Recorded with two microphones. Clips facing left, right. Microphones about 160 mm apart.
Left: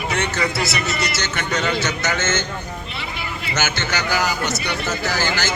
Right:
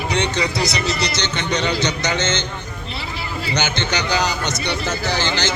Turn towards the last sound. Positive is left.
turn(degrees=-20)  # may be behind; listen again after turning